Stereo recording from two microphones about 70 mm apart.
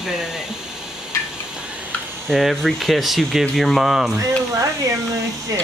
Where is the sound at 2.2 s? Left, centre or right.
Centre.